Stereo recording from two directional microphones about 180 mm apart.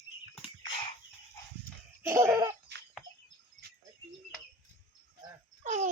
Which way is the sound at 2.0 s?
15° right (ahead or behind).